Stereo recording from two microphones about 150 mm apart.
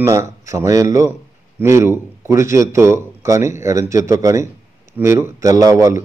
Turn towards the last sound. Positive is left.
turn(degrees=-20)  # may be behind; listen again after turning